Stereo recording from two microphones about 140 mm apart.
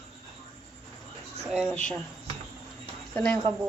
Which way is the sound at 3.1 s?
15° left (ahead or behind).